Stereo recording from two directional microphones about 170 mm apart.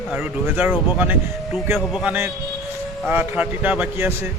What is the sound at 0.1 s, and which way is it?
Speech, 10° right (ahead or behind).